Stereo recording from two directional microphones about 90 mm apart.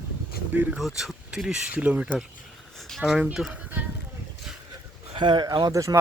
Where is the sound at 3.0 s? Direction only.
10° right (ahead or behind).